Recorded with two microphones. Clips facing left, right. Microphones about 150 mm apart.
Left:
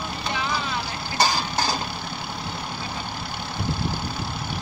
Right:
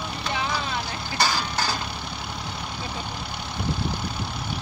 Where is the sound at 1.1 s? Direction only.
40° left (ahead or behind).